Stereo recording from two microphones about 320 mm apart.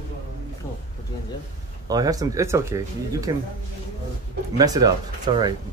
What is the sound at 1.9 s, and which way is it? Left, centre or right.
Speech, centre.